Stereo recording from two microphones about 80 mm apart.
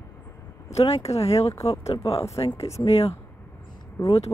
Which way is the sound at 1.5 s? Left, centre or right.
Left.